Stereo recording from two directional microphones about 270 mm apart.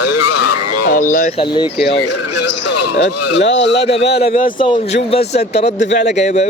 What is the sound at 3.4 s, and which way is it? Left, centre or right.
Speech, left.